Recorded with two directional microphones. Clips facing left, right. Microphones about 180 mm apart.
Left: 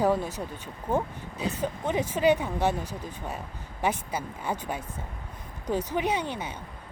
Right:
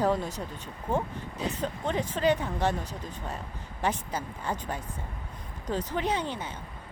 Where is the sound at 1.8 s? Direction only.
15° left (ahead or behind).